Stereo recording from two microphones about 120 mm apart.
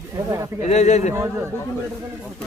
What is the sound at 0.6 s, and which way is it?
Speech, 70° left (ahead or behind).